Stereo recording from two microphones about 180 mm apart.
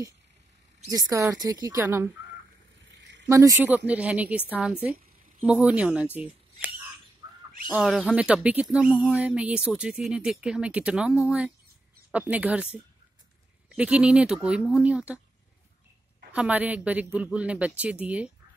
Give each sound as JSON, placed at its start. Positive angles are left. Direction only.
{"t": 0.8, "sound": "a woman's voice", "side_deg": -20}
{"t": 2.9, "sound": "a sound", "side_deg": -85}
{"t": 3.3, "sound": "a man's voice", "side_deg": -15}
{"t": 7.2, "sound": "bird", "side_deg": -25}
{"t": 7.7, "sound": "a man's voice", "side_deg": -5}
{"t": 13.7, "sound": "a man's voice", "side_deg": -5}
{"t": 16.3, "sound": "a man's voice", "side_deg": -5}